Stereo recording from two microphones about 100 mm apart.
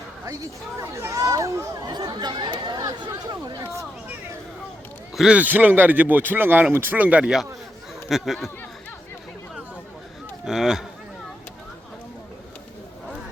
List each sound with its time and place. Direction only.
0.8 s speech: 30° right (ahead or behind)
1.9 s speech: 45° right (ahead or behind)
5.1 s speech: 10° right (ahead or behind)
10.4 s speech: 5° right (ahead or behind)